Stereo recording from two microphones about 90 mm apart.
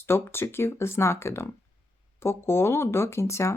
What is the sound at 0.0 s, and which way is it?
A woman's voice, 25° left (ahead or behind).